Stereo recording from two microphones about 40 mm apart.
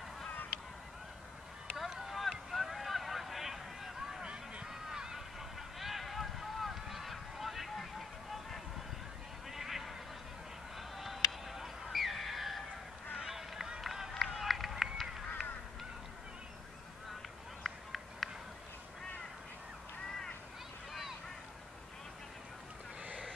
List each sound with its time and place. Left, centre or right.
1.9 s boat: centre
2.5 s vehicle: centre
4.2 s a sound: right
4.6 s a sound: centre
9.5 s a sound: centre
10.8 s honk: centre
13.2 s run: centre
15.4 s goose: centre
17.6 s run: centre